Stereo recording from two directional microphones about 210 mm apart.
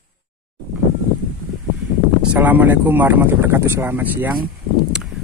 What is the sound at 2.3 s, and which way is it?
Speech, 10° right (ahead or behind).